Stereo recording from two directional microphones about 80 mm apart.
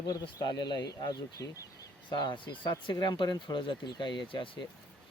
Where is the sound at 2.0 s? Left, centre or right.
Left.